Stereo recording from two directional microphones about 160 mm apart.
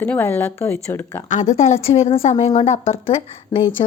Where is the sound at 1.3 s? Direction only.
45° left (ahead or behind).